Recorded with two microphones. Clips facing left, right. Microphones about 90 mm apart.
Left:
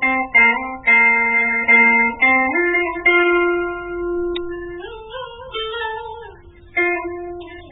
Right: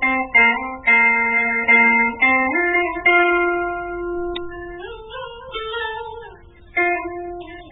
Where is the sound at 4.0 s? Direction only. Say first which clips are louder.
Left 3 dB; 30° right (ahead or behind).